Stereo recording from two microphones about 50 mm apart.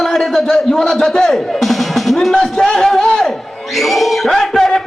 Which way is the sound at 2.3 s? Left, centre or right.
Centre.